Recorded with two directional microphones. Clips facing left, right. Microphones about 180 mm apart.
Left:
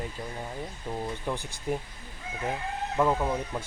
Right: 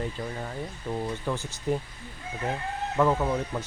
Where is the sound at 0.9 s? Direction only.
15° left (ahead or behind).